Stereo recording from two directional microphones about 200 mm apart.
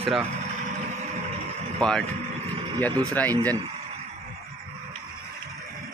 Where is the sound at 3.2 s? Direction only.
10° left (ahead or behind).